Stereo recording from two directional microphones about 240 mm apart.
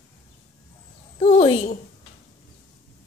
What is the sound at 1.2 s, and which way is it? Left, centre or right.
Speech, left.